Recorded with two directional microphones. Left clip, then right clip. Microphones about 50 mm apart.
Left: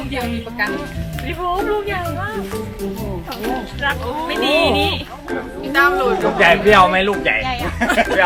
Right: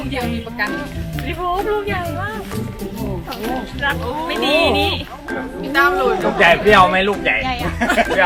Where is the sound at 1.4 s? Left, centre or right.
Centre.